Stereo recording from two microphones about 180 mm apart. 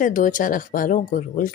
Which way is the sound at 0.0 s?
45° left (ahead or behind).